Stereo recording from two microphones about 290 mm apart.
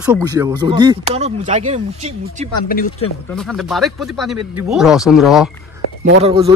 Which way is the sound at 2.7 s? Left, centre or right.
Left.